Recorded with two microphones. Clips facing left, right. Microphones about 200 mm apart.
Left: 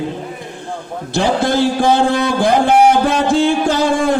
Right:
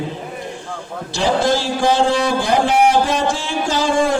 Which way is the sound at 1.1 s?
55° left (ahead or behind).